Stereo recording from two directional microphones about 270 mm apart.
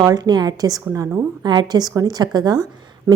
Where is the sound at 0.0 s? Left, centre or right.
Centre.